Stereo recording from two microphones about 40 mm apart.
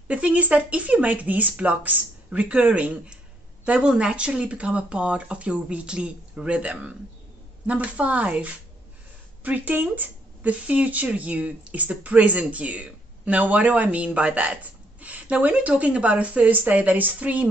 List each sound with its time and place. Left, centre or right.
0.1 s a woman's voice: right